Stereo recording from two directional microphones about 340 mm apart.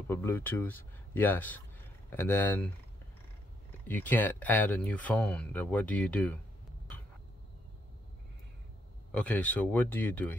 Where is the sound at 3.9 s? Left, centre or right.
Centre.